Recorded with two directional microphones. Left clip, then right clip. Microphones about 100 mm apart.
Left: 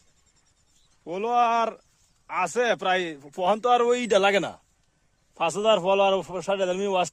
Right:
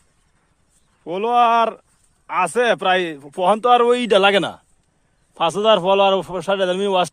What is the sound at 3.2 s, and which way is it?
A man's voice, 90° right.